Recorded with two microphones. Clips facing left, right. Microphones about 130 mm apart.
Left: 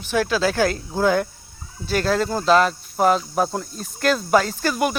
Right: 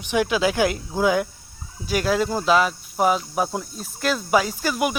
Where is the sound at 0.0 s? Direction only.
15° right (ahead or behind).